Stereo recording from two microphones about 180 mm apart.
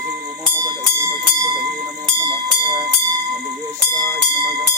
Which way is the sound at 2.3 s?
25° right (ahead or behind).